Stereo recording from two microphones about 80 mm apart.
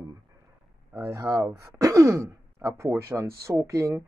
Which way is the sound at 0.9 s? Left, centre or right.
Right.